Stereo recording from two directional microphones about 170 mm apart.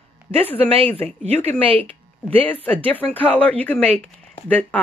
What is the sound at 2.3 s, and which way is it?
Speech, 10° left (ahead or behind).